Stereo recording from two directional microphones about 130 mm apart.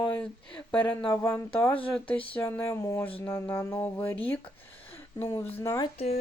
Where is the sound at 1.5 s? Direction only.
10° left (ahead or behind).